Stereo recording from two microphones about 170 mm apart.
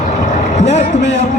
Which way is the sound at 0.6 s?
40° left (ahead or behind).